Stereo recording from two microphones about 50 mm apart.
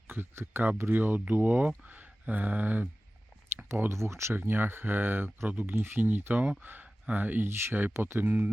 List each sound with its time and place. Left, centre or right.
0.1 s speech: right
3.8 s speech: right
4.4 s speech: right
6.8 s a sound: right
7.2 s speech: right
7.4 s speech: right